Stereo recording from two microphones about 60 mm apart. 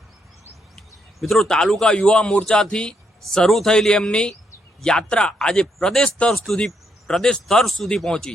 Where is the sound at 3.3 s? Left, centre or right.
Centre.